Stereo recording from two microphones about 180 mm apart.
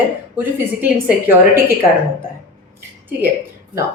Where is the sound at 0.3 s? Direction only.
10° right (ahead or behind).